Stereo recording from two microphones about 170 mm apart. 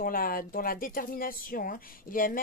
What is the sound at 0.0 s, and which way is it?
Speech, 55° left (ahead or behind).